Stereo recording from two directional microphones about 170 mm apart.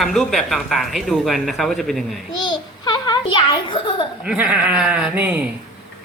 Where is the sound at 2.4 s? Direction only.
25° left (ahead or behind).